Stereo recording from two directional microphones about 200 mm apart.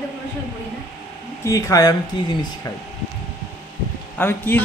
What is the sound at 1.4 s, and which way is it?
Speech, 15° left (ahead or behind).